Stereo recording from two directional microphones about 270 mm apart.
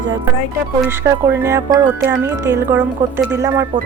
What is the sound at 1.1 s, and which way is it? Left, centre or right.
Speech, centre.